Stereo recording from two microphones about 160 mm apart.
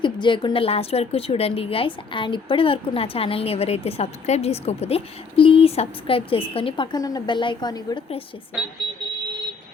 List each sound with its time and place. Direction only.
0.0 s a woman's voice: 30° left (ahead or behind)